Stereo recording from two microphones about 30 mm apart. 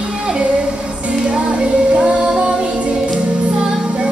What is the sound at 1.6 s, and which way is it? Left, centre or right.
Music, right.